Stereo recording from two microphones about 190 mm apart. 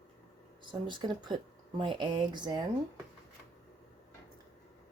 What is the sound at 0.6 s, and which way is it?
Speech, 25° right (ahead or behind).